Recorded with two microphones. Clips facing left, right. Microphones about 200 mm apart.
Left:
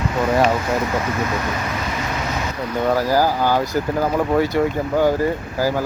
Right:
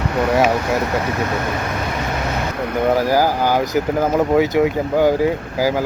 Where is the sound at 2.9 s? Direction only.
15° right (ahead or behind).